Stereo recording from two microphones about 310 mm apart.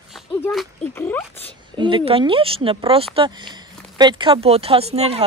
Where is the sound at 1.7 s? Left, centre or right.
Centre.